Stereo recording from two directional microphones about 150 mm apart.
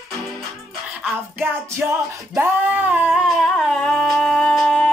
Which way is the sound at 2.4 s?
10° right (ahead or behind).